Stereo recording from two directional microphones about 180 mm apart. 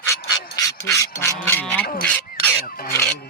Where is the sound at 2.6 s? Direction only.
55° left (ahead or behind).